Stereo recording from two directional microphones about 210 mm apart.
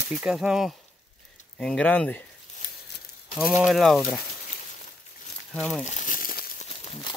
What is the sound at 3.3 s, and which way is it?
Speech, centre (ahead or behind).